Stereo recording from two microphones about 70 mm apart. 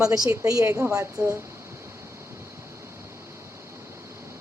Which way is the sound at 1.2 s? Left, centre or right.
Centre.